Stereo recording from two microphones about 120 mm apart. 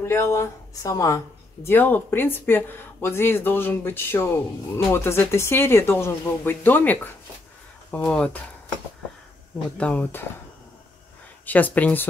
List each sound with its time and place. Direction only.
0.0 s speech: 20° left (ahead or behind)
9.8 s speech: 10° left (ahead or behind)
11.4 s speech: 15° left (ahead or behind)